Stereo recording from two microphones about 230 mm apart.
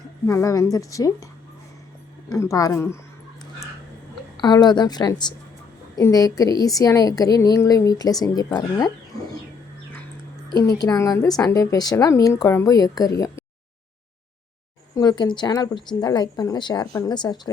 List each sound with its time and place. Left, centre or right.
0.3 s a woman's voice: centre
2.3 s a woman's voice: centre
4.4 s a woman's voice: centre
10.5 s a woman's voice: centre
14.9 s a woman's voice: centre